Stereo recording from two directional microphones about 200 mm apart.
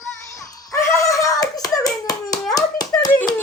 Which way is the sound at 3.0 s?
10° left (ahead or behind).